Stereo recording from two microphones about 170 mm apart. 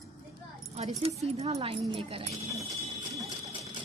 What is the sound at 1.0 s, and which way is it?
Speech, 40° right (ahead or behind).